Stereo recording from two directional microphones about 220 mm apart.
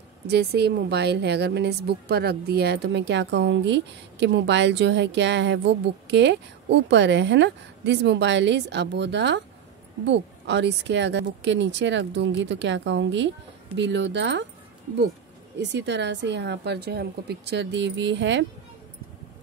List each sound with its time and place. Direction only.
0.3 s a woman's voice: 50° right (ahead or behind)
15.6 s a woman's voice: 55° right (ahead or behind)